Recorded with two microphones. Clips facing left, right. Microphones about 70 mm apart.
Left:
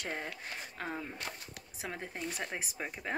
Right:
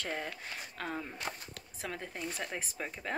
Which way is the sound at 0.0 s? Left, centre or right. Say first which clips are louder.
Right 1 dB; centre.